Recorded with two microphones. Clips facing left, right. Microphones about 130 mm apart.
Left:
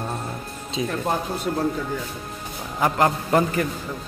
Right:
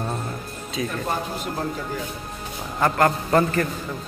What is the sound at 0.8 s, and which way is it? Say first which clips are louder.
Speech: left 1 dB; 20° left (ahead or behind).